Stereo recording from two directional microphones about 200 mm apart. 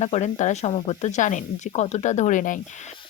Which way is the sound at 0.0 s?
35° left (ahead or behind).